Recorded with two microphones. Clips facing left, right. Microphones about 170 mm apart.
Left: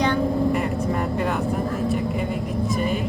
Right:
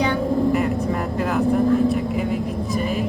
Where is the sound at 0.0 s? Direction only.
5° right (ahead or behind).